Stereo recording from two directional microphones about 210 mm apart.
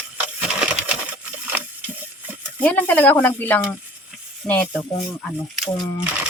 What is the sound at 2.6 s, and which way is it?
Speech, 10° left (ahead or behind).